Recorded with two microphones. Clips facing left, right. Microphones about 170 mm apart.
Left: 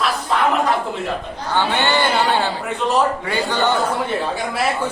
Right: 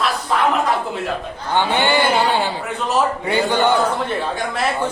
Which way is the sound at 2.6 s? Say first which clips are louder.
Left 1 dB; centre (ahead or behind).